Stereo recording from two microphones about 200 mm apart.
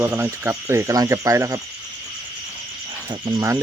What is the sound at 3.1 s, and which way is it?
Cricket, 20° right (ahead or behind).